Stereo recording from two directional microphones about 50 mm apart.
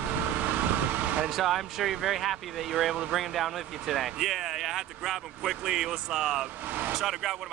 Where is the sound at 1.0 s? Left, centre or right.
Right.